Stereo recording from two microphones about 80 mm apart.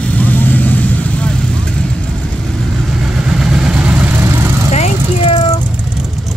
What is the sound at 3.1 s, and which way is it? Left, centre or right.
Vehicle, centre.